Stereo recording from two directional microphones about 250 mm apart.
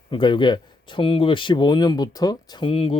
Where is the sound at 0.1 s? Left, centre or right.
Centre.